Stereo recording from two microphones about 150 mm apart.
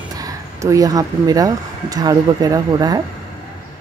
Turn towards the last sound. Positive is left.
turn(degrees=-25)  # may be behind; listen again after turning